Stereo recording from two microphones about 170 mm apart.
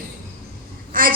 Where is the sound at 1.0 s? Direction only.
55° right (ahead or behind).